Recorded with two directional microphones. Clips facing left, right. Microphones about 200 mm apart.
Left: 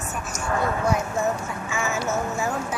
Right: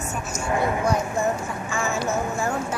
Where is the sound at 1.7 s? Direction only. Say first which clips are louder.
Right 1 dB; 5° left (ahead or behind).